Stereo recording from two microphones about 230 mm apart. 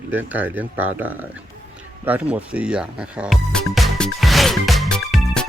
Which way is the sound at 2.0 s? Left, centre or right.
Centre.